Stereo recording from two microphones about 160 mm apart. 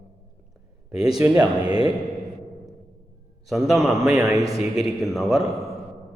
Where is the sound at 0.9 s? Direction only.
5° right (ahead or behind).